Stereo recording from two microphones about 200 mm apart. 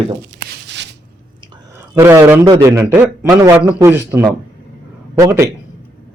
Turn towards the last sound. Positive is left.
turn(degrees=-15)  # may be behind; listen again after turning